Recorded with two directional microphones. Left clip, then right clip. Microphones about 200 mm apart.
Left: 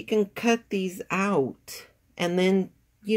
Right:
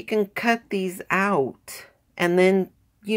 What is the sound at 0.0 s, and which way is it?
Speech, 15° right (ahead or behind).